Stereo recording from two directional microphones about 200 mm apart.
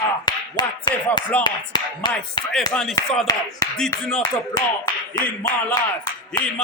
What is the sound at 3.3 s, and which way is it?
Speech, 15° left (ahead or behind).